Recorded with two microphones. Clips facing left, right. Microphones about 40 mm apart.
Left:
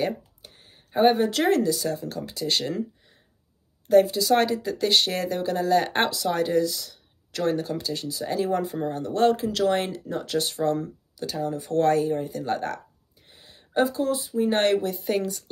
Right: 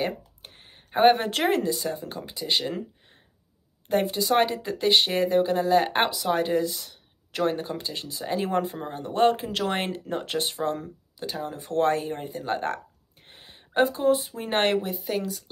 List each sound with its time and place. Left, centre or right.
0.4 s a sound: right
1.4 s speech: right
3.9 s speech: right
8.5 s speech: right
8.7 s speech: right
10.3 s speech: right
13.3 s a sound: right
14.0 s speech: right
14.6 s speech: right
15.0 s speech: centre